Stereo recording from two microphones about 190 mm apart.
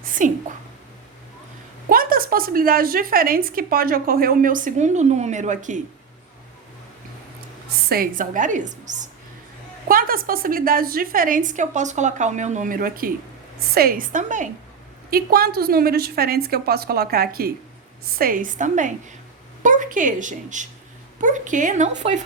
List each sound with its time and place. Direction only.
0.0 s a sound: 45° right (ahead or behind)
1.9 s a woman's voice: 50° right (ahead or behind)
7.9 s a woman's voice: 50° right (ahead or behind)
15.1 s a woman's voice: 55° right (ahead or behind)